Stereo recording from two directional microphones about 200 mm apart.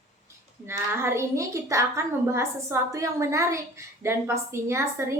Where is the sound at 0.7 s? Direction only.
10° right (ahead or behind).